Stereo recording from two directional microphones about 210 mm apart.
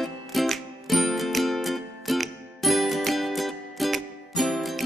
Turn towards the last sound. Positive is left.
turn(degrees=0)  # may be behind; listen again after turning